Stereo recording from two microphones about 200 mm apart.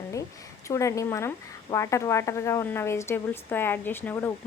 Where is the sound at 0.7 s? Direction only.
15° left (ahead or behind).